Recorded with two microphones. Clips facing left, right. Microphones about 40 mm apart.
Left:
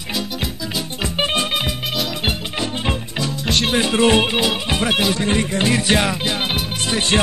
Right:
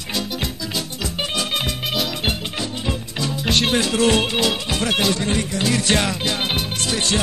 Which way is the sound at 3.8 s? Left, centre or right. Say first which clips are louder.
Left 3 dB; left.